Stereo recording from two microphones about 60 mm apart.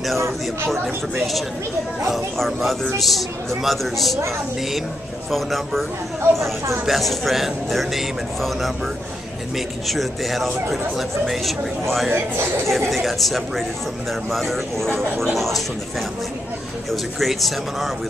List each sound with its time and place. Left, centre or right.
0.7 s speech: centre
5.3 s speech: centre
6.9 s speech: centre
9.8 s speech: centre
12.1 s speech: right
12.9 s speech: centre
16.9 s speech: centre